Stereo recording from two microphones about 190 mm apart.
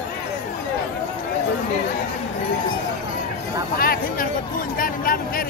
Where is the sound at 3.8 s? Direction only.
50° left (ahead or behind).